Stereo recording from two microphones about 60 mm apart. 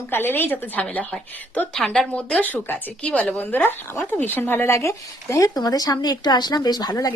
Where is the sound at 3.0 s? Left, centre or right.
Centre; by 7.1 s left.